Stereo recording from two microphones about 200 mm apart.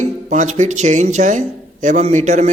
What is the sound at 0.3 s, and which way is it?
Speech, 35° right (ahead or behind).